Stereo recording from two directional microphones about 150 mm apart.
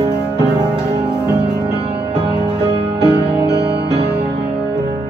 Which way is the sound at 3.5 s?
90° right.